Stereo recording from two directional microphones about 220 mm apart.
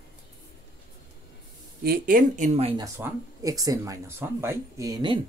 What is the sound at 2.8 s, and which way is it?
Speech, 15° right (ahead or behind).